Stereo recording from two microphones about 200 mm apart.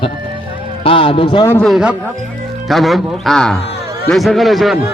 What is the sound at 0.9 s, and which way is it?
Speech, 25° left (ahead or behind).